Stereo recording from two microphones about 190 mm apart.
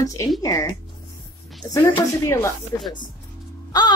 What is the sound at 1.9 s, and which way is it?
Speech, 15° left (ahead or behind).